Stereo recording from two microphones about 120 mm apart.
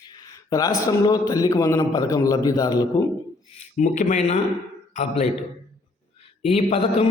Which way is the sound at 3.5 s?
85° left.